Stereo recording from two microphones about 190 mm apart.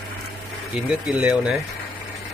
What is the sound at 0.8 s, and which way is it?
Speech, 5° right (ahead or behind).